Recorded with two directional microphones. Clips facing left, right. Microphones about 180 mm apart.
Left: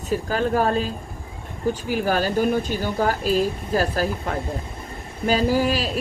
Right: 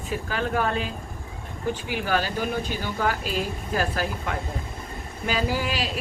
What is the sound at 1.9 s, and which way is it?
Speech, 40° left (ahead or behind).